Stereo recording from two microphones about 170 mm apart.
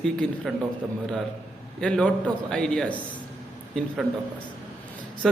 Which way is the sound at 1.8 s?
5° left (ahead or behind).